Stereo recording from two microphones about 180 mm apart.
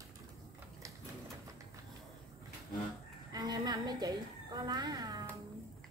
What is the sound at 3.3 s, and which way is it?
A woman's voice, 20° right (ahead or behind).